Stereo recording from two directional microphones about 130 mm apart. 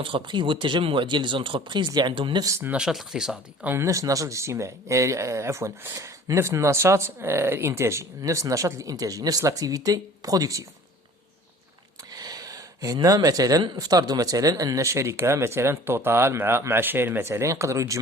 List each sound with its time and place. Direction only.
0.0 s speech: 40° right (ahead or behind)
2.4 s speech: 20° right (ahead or behind)
2.7 s speech: 5° right (ahead or behind)
3.7 s speech: 20° right (ahead or behind)
12.1 s speech: 30° right (ahead or behind)